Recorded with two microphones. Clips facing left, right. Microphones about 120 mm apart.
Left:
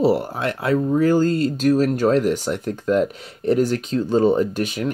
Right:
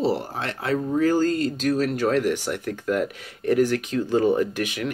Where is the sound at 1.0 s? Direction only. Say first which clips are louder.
Left 1 dB; 40° left (ahead or behind).